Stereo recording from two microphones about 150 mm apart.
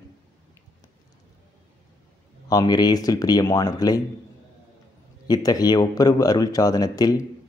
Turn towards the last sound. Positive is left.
turn(degrees=25)  # may be behind; listen again after turning